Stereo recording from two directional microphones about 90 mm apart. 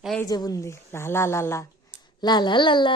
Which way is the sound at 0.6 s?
30° left (ahead or behind).